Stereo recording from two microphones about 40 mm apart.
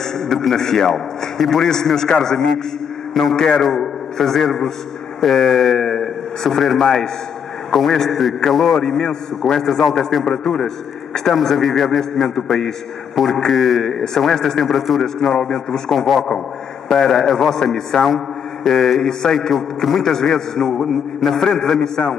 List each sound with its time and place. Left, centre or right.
0.0 s a man's voice: centre
3.4 s a man's voice: centre
8.8 s a man's voice: centre
11.3 s a man's voice: centre
14.7 s a man's voice: centre
15.1 s a man's voice: centre